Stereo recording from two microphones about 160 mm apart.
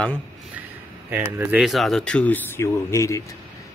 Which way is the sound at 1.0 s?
10° right (ahead or behind).